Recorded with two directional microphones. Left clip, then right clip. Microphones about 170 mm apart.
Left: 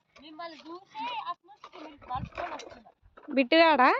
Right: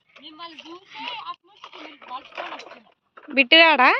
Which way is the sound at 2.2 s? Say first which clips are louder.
Right 3 dB; 40° right (ahead or behind).